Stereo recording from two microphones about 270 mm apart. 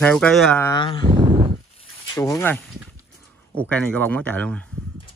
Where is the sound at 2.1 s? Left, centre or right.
Centre.